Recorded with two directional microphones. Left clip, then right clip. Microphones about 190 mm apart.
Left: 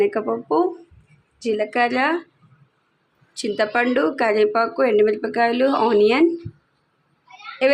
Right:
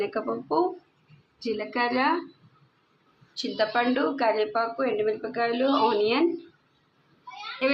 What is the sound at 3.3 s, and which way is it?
Speech, 40° left (ahead or behind).